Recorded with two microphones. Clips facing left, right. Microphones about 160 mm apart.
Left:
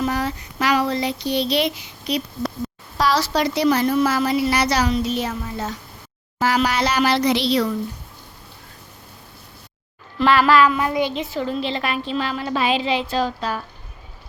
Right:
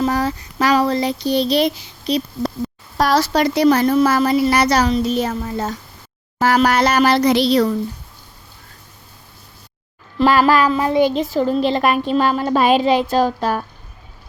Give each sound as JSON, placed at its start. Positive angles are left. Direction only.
{"t": 0.0, "sound": "speech", "side_deg": -35}
{"t": 3.0, "sound": "a woman's voice", "side_deg": -50}
{"t": 10.2, "sound": "a woman's voice", "side_deg": -40}